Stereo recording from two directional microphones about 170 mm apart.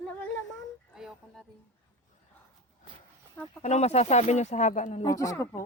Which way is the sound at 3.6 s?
40° left (ahead or behind).